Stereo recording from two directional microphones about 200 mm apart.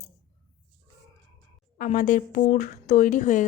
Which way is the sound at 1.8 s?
40° left (ahead or behind).